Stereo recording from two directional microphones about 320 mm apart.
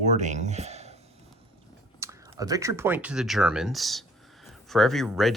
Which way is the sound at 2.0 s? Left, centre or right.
Centre.